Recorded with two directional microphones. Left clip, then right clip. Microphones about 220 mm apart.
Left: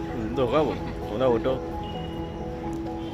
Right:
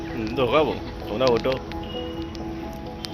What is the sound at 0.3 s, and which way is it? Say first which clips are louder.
Speech: right 3 dB; 5° left (ahead or behind).